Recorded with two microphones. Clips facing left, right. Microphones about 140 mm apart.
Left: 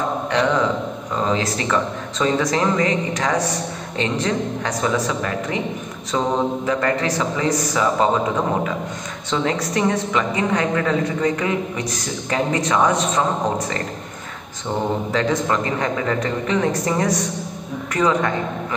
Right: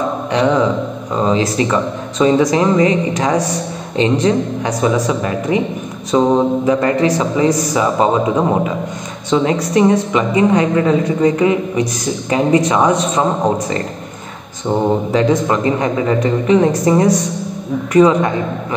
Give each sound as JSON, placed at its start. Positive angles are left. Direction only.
{"t": 0.3, "sound": "a man's voice", "side_deg": -20}
{"t": 15.1, "sound": "a man's voice", "side_deg": -20}